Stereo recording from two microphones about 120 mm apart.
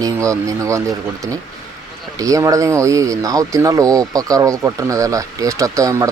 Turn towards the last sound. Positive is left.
turn(degrees=-25)  # may be behind; listen again after turning